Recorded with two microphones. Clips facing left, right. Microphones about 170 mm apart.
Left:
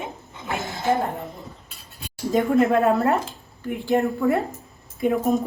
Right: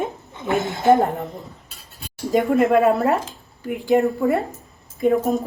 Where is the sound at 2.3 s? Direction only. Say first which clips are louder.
Right 2 dB; 5° right (ahead or behind).